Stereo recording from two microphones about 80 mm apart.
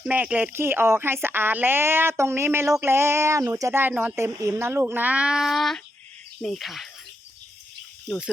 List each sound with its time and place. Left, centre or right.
0.0 s speech: centre
0.5 s speech: right
3.7 s speech: right; by 6.8 s centre